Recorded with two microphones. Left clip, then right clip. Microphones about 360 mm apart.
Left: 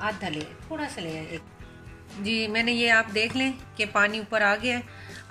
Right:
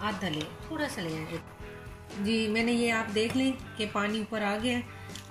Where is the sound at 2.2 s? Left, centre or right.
Left.